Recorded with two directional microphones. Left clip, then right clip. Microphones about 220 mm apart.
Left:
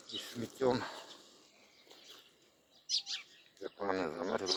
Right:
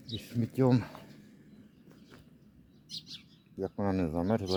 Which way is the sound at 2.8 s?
50° right (ahead or behind).